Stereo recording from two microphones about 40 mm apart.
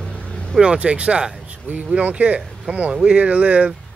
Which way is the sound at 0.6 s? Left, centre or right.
Right.